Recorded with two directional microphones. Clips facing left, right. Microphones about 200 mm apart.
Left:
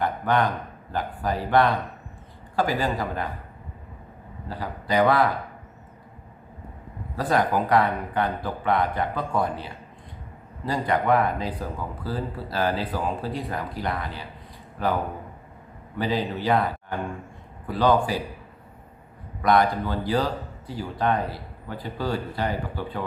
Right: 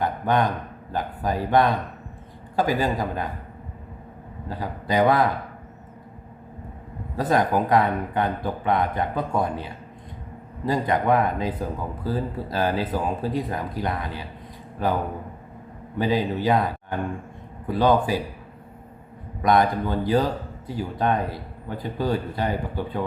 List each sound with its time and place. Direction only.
0.0 s a sound: 15° right (ahead or behind)
0.9 s speech: 15° right (ahead or behind)
4.4 s speech: 20° right (ahead or behind)
7.2 s speech: 20° right (ahead or behind)
10.7 s speech: 15° right (ahead or behind)
16.0 s speech: 10° right (ahead or behind)
19.4 s speech: 20° right (ahead or behind)